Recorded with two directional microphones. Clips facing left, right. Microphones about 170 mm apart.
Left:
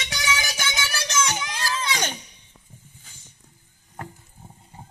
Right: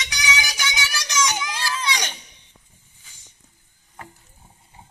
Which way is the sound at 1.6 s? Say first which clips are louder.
Left 2 dB; 50° left (ahead or behind).